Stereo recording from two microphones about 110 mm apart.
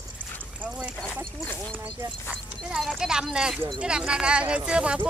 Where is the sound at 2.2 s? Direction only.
5° right (ahead or behind).